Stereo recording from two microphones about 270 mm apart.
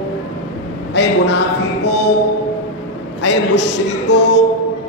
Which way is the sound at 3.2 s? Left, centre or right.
Left.